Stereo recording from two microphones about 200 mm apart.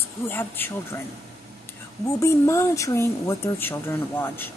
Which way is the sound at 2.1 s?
15° left (ahead or behind).